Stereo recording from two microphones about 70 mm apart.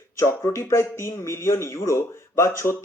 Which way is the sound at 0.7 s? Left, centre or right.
Left.